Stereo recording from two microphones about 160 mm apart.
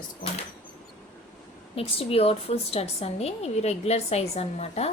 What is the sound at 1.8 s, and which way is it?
A woman's voice, 35° left (ahead or behind).